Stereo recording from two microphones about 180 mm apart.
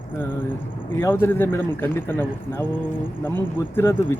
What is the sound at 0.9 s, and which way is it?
A man's voice, 10° left (ahead or behind).